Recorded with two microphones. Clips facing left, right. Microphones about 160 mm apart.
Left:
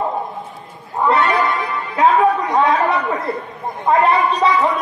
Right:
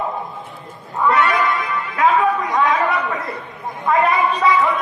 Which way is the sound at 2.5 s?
30° left (ahead or behind).